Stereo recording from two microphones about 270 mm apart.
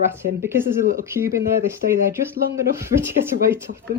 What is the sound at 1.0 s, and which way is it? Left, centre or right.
Speech, centre.